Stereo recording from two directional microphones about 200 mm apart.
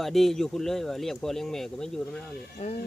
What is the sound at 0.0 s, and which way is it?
Speech, centre (ahead or behind).